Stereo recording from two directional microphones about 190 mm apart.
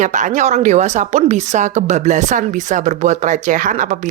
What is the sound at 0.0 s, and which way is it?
A woman's voice, 40° right (ahead or behind).